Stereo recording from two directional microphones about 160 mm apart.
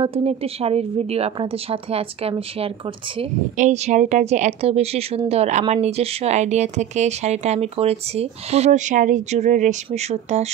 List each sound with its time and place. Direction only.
0.0 s speech: 35° right (ahead or behind)
3.5 s speech: 45° right (ahead or behind)